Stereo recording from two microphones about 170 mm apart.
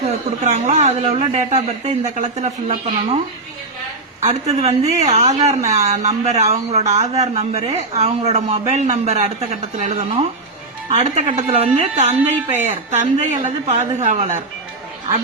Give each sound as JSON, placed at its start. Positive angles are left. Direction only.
{"t": 0.4, "sound": "speech", "side_deg": -45}
{"t": 4.2, "sound": "a woman's voice", "side_deg": -40}